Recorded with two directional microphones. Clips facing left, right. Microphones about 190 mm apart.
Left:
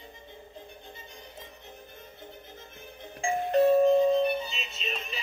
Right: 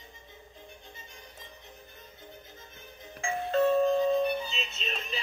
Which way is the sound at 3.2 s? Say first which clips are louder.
Left 3 dB; 25° left (ahead or behind).